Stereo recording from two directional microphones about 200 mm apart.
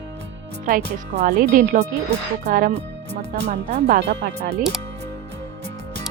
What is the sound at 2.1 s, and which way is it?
Speech, 50° right (ahead or behind).